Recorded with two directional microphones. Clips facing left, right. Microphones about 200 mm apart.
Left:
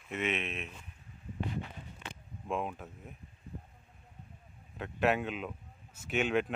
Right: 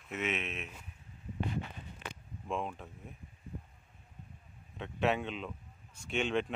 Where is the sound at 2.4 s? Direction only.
5° left (ahead or behind).